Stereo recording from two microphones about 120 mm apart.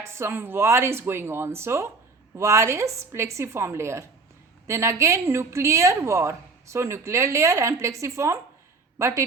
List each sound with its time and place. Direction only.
0.0 s a woman's voice: 20° right (ahead or behind)